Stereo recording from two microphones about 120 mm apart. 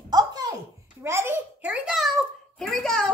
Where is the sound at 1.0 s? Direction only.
20° right (ahead or behind); by 3.1 s 5° left (ahead or behind).